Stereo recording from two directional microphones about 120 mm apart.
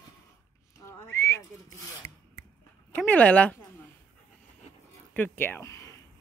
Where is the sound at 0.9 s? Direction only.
20° left (ahead or behind).